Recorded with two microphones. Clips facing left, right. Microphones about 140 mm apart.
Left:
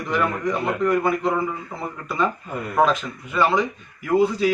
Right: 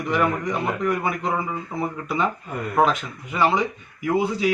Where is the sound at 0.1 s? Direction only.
15° right (ahead or behind).